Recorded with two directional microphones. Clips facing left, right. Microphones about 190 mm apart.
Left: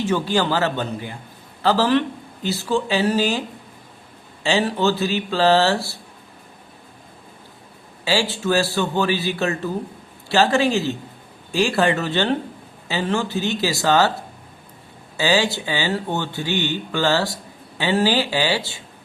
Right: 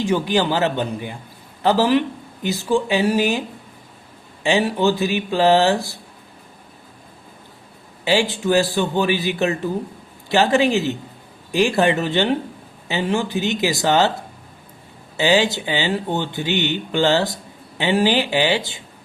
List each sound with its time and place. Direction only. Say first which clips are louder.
0.0 s speech: right 1 dB; 15° right (ahead or behind)
4.4 s speech: right 2 dB; 15° right (ahead or behind)
8.0 s speech: right 2 dB; 20° right (ahead or behind)
15.2 s speech: right 2 dB; 20° right (ahead or behind)